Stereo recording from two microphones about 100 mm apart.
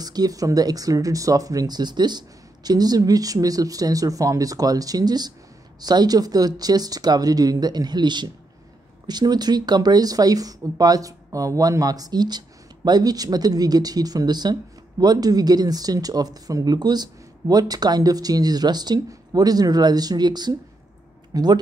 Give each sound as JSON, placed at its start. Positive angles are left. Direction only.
{"t": 0.0, "sound": "speech", "side_deg": -40}